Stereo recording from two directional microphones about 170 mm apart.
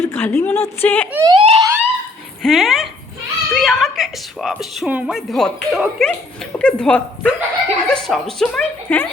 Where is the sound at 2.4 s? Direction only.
Centre (ahead or behind).